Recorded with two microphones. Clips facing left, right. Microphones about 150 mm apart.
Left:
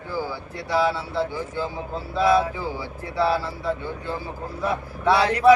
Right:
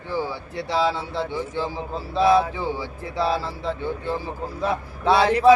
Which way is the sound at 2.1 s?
25° right (ahead or behind).